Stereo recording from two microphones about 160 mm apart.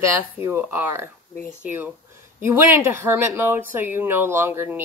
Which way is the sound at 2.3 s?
10° right (ahead or behind).